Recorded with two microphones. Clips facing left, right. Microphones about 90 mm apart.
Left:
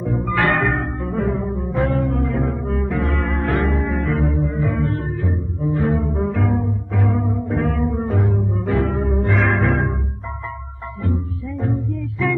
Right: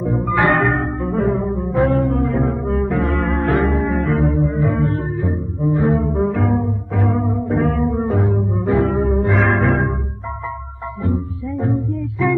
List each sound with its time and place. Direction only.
0.0 s music: centre (ahead or behind)
0.3 s music: 20° right (ahead or behind)
0.6 s music: centre (ahead or behind)
11.5 s music: centre (ahead or behind)